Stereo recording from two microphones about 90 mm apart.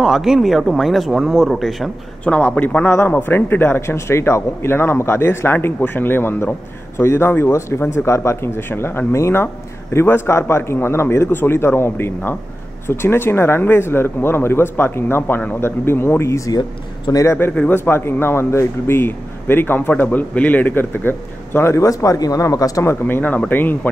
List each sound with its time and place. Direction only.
0.0 s speech: 5° right (ahead or behind)
2.2 s a man's voice: 15° left (ahead or behind); by 17.5 s 35° left (ahead or behind)
17.5 s speech: 20° left (ahead or behind); by 22.9 s 40° left (ahead or behind)
23.0 s speech: 20° left (ahead or behind)